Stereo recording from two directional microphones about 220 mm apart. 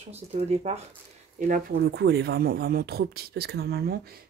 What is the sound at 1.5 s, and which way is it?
Speech, 50° right (ahead or behind).